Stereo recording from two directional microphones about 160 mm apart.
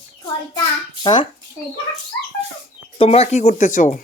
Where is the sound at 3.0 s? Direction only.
40° left (ahead or behind).